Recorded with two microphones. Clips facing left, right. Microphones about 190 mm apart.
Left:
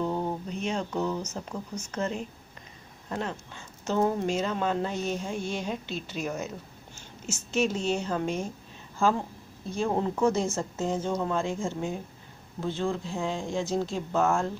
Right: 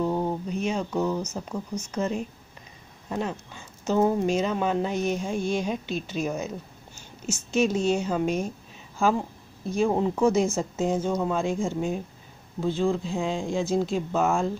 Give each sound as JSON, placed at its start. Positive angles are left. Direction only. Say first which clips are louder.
{"t": 0.0, "sound": "a sound", "louder": "right 3 dB", "side_deg": -10}
{"t": 1.3, "sound": "speech", "louder": "right 4 dB", "side_deg": -10}
{"t": 7.5, "sound": "speech", "louder": "right 4 dB", "side_deg": -15}
{"t": 9.7, "sound": "speech", "louder": "right 4 dB", "side_deg": -10}